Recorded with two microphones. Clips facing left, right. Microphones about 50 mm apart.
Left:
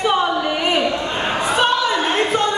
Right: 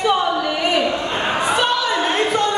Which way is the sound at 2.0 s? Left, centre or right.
Left.